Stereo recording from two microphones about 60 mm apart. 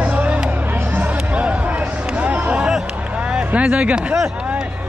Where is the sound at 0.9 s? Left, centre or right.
Right.